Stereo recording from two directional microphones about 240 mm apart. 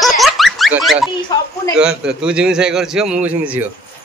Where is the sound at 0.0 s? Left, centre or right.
Centre.